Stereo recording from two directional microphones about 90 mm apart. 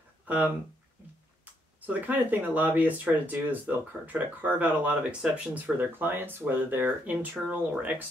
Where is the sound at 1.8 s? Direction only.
20° right (ahead or behind).